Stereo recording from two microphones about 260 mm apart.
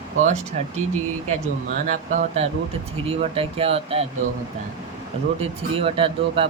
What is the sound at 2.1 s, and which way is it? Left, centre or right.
Speech, right.